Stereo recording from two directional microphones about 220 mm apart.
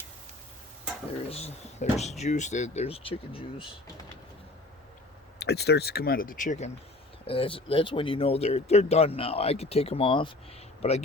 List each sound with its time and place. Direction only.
1.3 s speech: 30° left (ahead or behind)
5.4 s speech: 50° left (ahead or behind)
7.3 s speech: 25° left (ahead or behind)